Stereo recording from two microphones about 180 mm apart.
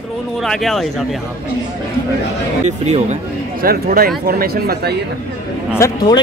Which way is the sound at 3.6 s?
55° right (ahead or behind).